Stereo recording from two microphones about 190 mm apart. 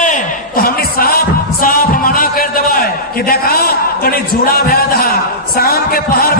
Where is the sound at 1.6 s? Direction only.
50° left (ahead or behind).